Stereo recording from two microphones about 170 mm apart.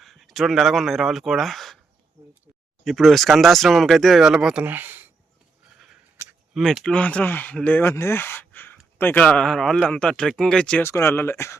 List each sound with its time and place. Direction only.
0.0 s speech: centre (ahead or behind)
2.8 s speech: centre (ahead or behind)
6.5 s speech: centre (ahead or behind); by 11.5 s 15° left (ahead or behind)